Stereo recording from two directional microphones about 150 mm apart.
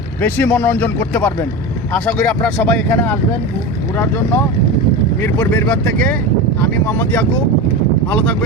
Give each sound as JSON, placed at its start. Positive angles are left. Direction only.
{"t": 0.2, "sound": "speech", "side_deg": 10}
{"t": 1.1, "sound": "speech", "side_deg": 20}
{"t": 1.9, "sound": "speech", "side_deg": 10}
{"t": 5.2, "sound": "speech", "side_deg": 10}